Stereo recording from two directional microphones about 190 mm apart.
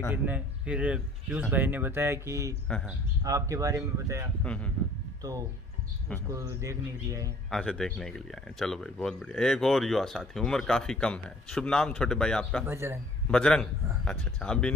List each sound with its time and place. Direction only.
0.1 s speech: 5° right (ahead or behind)
4.4 s a man's voice: 5° left (ahead or behind)
6.6 s speech: 15° right (ahead or behind)
7.5 s speech: centre (ahead or behind)
12.6 s speech: 15° right (ahead or behind)
13.3 s speech: 5° left (ahead or behind)